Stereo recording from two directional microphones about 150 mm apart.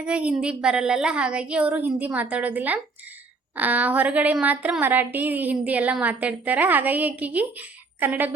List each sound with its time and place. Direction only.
0.0 s a woman's voice: 5° right (ahead or behind)